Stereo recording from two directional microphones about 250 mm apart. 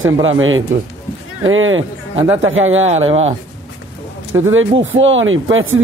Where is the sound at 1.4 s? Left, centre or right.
Right.